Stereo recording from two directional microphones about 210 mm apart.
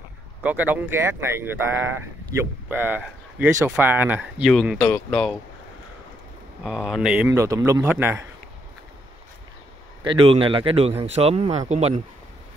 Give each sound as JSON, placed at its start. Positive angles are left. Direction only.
{"t": 0.4, "sound": "speech", "side_deg": -5}
{"t": 6.6, "sound": "speech", "side_deg": -5}
{"t": 10.0, "sound": "a man's voice", "side_deg": -25}